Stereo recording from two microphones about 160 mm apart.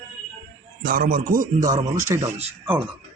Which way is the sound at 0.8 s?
65° right (ahead or behind).